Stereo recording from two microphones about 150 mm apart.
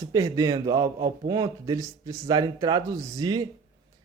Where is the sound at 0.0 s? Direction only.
20° right (ahead or behind).